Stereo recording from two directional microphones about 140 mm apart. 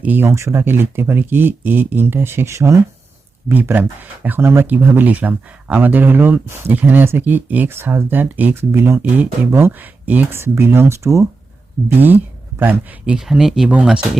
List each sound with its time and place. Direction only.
0.0 s speech: 15° right (ahead or behind)
12.5 s speech: 10° right (ahead or behind)